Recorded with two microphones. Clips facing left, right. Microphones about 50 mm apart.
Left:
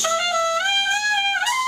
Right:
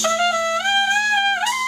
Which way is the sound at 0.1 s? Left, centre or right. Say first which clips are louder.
Right 2 dB; centre.